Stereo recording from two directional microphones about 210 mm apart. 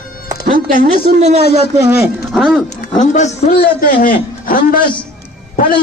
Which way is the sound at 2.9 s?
35° left (ahead or behind).